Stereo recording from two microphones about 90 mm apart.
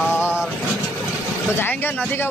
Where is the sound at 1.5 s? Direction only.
25° left (ahead or behind).